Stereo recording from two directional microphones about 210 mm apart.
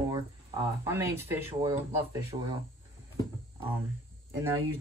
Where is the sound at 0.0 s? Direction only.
15° right (ahead or behind).